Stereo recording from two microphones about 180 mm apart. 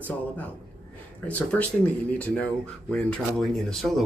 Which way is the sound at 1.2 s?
10° left (ahead or behind).